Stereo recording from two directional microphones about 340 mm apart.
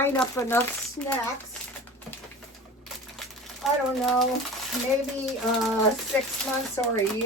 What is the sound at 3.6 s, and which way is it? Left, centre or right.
Speech, centre.